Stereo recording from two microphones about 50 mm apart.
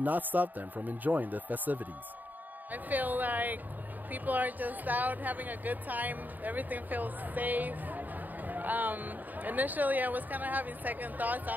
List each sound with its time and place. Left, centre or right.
0.0 s speech: right